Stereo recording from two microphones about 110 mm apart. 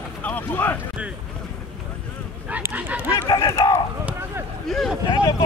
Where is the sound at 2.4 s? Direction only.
15° right (ahead or behind).